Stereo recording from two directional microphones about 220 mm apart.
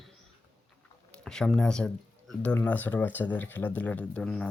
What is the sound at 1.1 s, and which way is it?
Speech, 5° left (ahead or behind).